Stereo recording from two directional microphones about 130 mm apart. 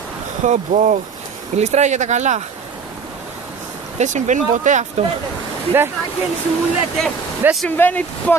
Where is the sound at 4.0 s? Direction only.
65° right (ahead or behind).